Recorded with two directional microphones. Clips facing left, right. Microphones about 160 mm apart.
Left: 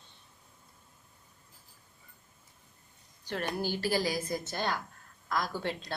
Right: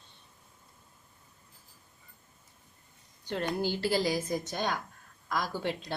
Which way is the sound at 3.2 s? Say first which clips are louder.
Right 2 dB; 20° right (ahead or behind).